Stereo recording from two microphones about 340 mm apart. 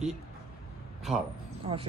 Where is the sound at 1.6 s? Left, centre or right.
Centre.